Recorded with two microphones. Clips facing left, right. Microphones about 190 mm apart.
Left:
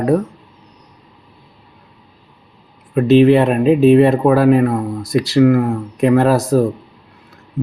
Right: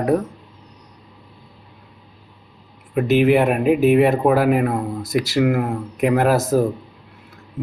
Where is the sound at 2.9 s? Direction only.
15° right (ahead or behind).